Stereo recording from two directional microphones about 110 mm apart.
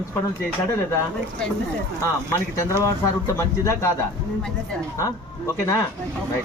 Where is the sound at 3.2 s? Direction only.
25° left (ahead or behind).